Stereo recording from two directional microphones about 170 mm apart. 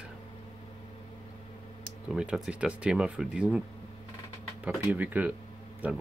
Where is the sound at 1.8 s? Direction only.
5° right (ahead or behind).